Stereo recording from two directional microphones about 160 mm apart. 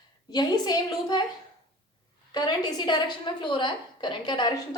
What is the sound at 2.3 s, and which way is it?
A woman's voice, 25° left (ahead or behind).